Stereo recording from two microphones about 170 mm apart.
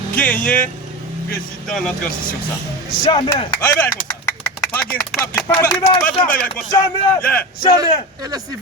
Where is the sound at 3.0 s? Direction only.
30° left (ahead or behind).